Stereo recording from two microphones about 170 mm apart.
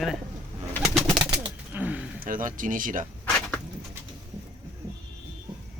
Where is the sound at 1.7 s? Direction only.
10° right (ahead or behind).